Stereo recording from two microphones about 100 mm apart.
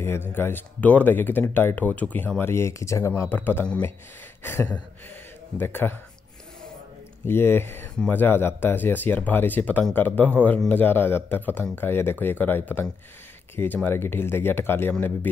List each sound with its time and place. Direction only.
0.0 s speech: 25° left (ahead or behind)
7.2 s a man's voice: 20° left (ahead or behind)
13.8 s speech: 20° left (ahead or behind)